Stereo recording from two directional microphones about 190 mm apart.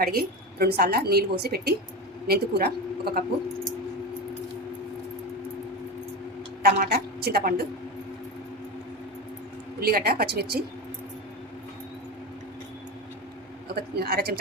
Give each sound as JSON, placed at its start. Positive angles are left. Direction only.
{"t": 0.0, "sound": "a woman's voice", "side_deg": -55}
{"t": 6.6, "sound": "a woman's voice", "side_deg": -50}
{"t": 9.8, "sound": "a woman's voice", "side_deg": -55}
{"t": 13.7, "sound": "a woman's voice", "side_deg": -55}